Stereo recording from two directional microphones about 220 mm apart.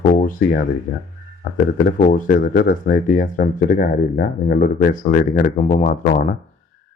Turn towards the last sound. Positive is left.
turn(degrees=35)  # may be behind; listen again after turning